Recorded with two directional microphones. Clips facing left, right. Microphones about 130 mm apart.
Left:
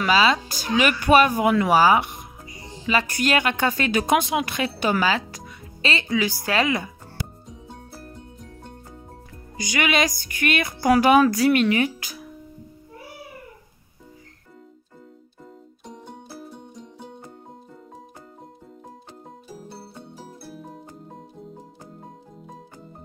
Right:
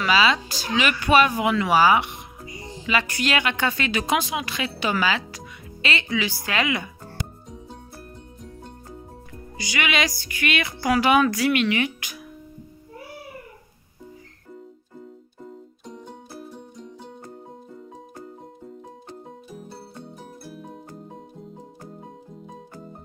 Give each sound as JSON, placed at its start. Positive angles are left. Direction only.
{"t": 0.0, "sound": "speech", "side_deg": 40}
{"t": 9.6, "sound": "speech", "side_deg": 45}
{"t": 15.9, "sound": "music", "side_deg": 0}
{"t": 20.4, "sound": "music", "side_deg": 0}